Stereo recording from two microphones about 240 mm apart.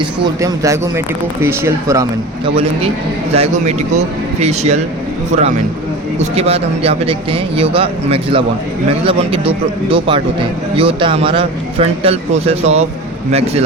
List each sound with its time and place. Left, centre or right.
0.0 s speech: centre
3.3 s speech: right
6.1 s speech: right